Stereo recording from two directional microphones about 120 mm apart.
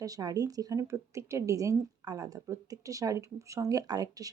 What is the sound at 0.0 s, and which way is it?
A woman's voice, 30° right (ahead or behind).